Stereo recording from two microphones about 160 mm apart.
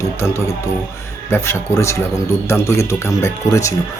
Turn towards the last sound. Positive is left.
turn(degrees=20)  # may be behind; listen again after turning